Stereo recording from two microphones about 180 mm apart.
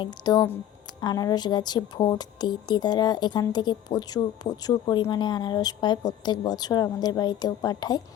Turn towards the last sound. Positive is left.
turn(degrees=20)  # may be behind; listen again after turning